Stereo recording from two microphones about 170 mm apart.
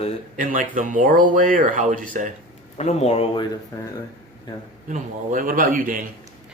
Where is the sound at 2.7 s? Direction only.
40° left (ahead or behind).